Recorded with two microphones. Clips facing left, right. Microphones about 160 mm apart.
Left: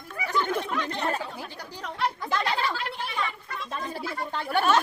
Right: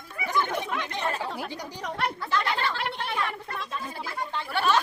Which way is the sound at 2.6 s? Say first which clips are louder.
Even; 65° right (ahead or behind).